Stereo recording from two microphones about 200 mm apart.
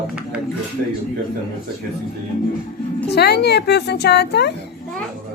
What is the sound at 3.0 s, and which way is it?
A woman's voice, 55° left (ahead or behind).